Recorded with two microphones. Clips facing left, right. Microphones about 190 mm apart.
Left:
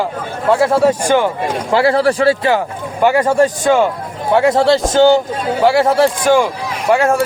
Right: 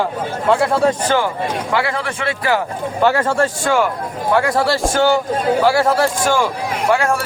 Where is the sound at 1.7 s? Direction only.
35° left (ahead or behind).